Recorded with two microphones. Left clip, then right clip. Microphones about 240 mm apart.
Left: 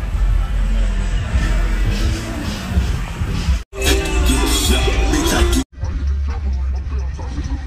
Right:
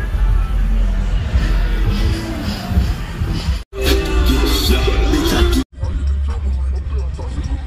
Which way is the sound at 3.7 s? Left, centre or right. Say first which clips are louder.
Even; left.